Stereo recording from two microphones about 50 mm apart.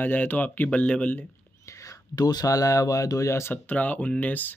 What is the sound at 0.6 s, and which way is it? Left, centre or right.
Speech, left.